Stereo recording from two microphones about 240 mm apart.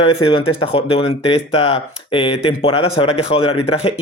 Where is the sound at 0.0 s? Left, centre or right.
Left.